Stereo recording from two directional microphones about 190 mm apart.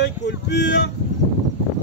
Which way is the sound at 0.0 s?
65° left (ahead or behind).